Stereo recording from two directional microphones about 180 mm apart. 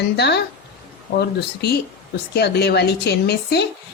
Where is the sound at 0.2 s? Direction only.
65° left (ahead or behind).